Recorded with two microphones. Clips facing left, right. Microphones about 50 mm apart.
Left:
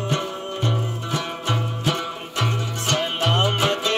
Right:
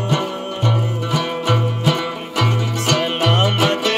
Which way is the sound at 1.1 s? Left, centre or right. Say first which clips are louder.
Right 7 dB; right.